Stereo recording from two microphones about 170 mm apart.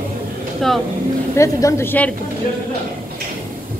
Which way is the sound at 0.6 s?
Centre (ahead or behind).